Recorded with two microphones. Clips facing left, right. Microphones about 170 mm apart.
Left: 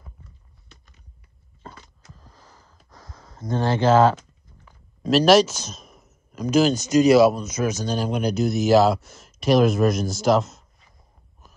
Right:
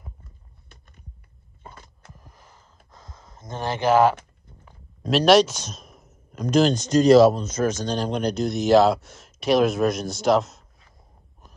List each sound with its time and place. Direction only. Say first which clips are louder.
0.2 s biting: left 1 dB; 50° right (ahead or behind)
2.1 s a sound: even; 20° right (ahead or behind)
5.0 s speech: left 1 dB; centre (ahead or behind)